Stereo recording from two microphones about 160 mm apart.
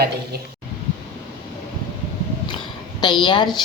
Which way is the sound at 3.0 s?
30° left (ahead or behind).